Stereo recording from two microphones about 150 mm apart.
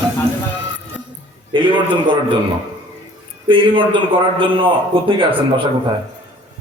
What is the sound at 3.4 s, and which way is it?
A man's voice, 35° right (ahead or behind).